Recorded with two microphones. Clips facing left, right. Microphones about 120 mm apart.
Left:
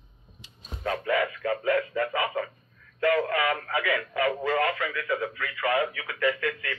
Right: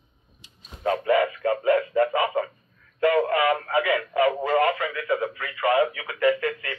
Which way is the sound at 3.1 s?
25° right (ahead or behind).